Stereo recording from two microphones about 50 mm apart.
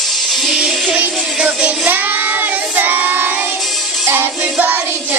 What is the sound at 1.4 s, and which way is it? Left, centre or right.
Music, right.